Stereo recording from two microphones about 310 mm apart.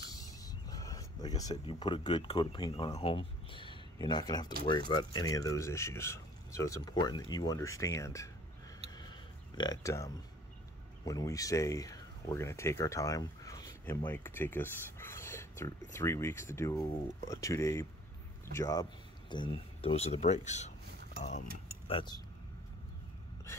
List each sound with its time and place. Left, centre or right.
0.1 s speech: centre
8.9 s a sound: centre
11.1 s speech: centre